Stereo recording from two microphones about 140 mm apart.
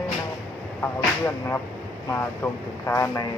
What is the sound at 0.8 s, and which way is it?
Speech, 15° left (ahead or behind).